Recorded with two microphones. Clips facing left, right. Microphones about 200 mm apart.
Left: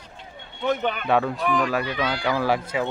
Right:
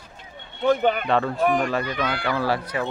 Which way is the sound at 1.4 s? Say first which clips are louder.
Right 2 dB; 45° right (ahead or behind).